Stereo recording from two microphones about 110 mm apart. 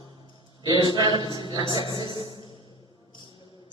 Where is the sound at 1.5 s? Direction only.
45° left (ahead or behind).